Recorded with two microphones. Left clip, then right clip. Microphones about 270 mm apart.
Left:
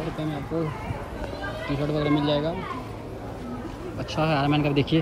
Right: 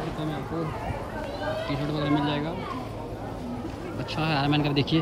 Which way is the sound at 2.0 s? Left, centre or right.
Left.